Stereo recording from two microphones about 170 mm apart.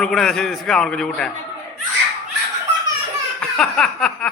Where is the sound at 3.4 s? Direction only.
5° left (ahead or behind).